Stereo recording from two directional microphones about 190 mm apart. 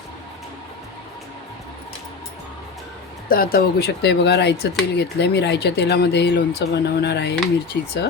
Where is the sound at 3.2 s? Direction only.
50° left (ahead or behind).